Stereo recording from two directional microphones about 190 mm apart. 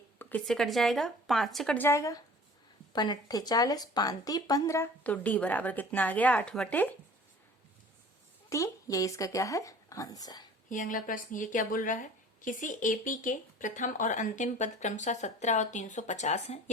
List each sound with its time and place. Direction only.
0.2 s speech: 10° left (ahead or behind)
8.4 s speech: 15° left (ahead or behind)
10.7 s a woman's voice: 45° left (ahead or behind)